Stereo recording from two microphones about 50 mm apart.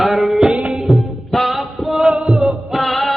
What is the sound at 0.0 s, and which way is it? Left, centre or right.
Music, centre.